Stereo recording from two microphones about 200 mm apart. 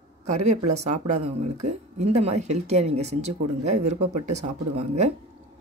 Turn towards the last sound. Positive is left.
turn(degrees=-35)  # may be behind; listen again after turning